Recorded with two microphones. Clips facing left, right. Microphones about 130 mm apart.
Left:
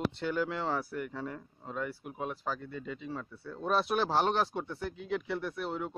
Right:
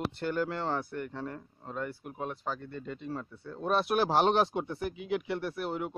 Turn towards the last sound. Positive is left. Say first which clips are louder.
# right 2 dB
turn(degrees=-5)  # may be behind; listen again after turning